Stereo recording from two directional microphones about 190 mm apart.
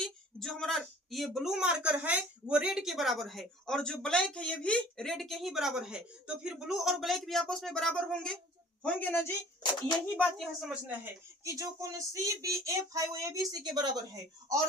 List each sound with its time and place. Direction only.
0.0 s a woman's voice: centre (ahead or behind); by 14.0 s 20° right (ahead or behind)